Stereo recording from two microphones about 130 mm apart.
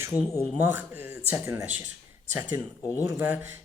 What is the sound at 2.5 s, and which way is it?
Speech, 20° right (ahead or behind).